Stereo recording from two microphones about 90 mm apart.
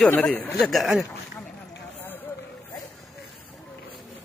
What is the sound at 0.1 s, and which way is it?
Speech, 20° left (ahead or behind).